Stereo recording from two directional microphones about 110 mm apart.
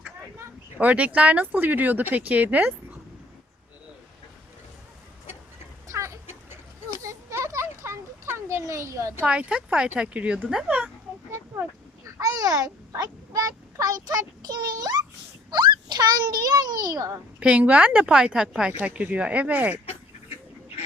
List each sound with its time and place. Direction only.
0.3 s speech: 15° right (ahead or behind)
5.9 s a sound: 25° right (ahead or behind)
9.2 s speech: 10° right (ahead or behind)
12.1 s a child's voice: 35° right (ahead or behind)
17.4 s speech: 15° right (ahead or behind)